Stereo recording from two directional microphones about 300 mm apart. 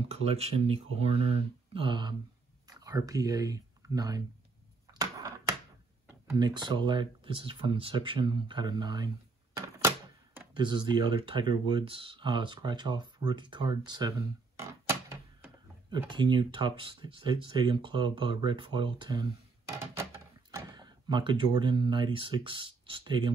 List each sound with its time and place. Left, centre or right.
0.1 s speech: centre
6.0 s speech: centre
14.6 s a sound: centre
16.1 s speech: centre